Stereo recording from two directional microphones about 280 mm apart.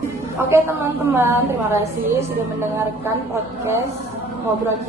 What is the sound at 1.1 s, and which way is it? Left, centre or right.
Speech, centre.